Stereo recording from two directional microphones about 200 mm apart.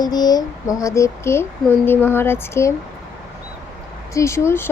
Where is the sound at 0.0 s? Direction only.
20° left (ahead or behind).